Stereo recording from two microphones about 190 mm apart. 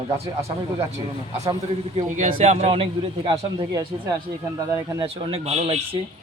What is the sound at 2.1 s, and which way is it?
Speech, 35° right (ahead or behind).